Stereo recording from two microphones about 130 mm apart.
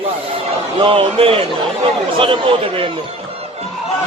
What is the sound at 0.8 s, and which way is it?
Speech, 45° right (ahead or behind).